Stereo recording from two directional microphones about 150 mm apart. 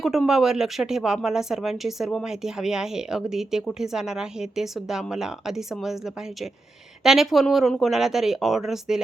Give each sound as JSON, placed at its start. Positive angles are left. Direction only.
{"t": 0.0, "sound": "speech", "side_deg": 0}
{"t": 7.0, "sound": "speech", "side_deg": 0}